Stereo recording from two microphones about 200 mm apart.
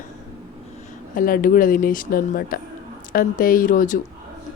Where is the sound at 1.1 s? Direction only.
45° left (ahead or behind).